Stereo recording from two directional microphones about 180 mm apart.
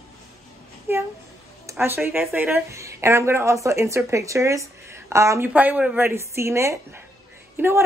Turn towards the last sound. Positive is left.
turn(degrees=-15)  # may be behind; listen again after turning